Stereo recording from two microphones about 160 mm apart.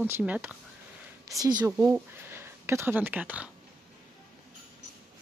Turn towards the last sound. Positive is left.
turn(degrees=-10)  # may be behind; listen again after turning